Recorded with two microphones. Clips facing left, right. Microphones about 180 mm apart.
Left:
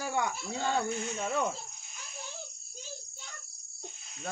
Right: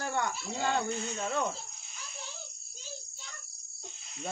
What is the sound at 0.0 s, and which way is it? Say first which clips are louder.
Cricket: left 1 dB; 10° left (ahead or behind).